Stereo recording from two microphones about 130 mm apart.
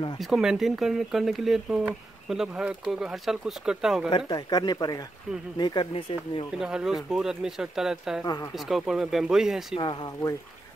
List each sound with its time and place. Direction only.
0.2 s speech: 5° right (ahead or behind)
4.3 s speech: 30° left (ahead or behind)
6.6 s speech: 5° right (ahead or behind)